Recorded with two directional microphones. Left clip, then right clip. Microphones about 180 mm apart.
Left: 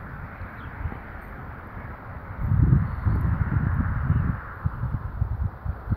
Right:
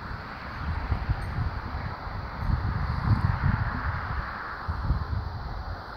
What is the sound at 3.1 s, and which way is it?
Wind, 45° left (ahead or behind).